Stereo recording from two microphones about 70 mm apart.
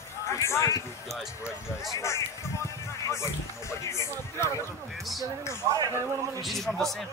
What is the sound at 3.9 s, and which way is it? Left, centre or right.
Speech, left.